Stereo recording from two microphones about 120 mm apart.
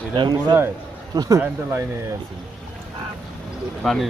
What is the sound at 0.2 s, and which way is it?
Speech, 40° right (ahead or behind).